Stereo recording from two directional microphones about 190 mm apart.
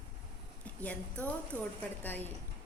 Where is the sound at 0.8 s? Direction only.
10° left (ahead or behind).